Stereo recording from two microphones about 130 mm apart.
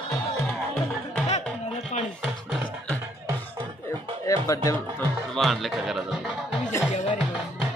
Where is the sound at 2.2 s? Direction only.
Centre (ahead or behind).